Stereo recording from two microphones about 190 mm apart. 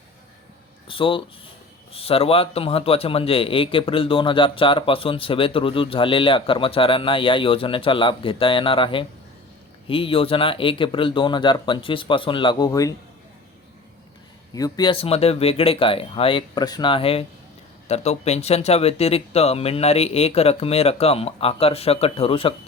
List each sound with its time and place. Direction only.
0.9 s a man's voice: 25° left (ahead or behind)
14.5 s a man's voice: 20° left (ahead or behind)